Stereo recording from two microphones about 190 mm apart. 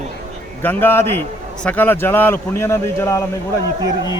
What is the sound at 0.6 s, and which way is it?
A man's voice, 10° left (ahead or behind).